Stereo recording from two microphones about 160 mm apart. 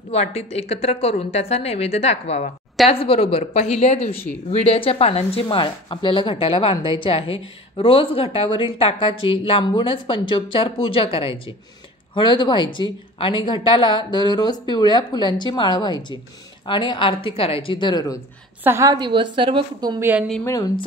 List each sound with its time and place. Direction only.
0.1 s speech: 40° left (ahead or behind); by 18.2 s 25° left (ahead or behind)
18.6 s a woman's voice: 15° right (ahead or behind)
20.0 s a woman's voice: 10° right (ahead or behind)